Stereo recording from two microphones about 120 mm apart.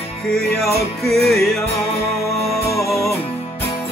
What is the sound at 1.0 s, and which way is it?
Music, centre (ahead or behind).